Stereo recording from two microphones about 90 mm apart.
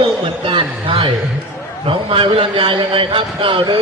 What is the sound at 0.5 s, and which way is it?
A man's voice, 80° right.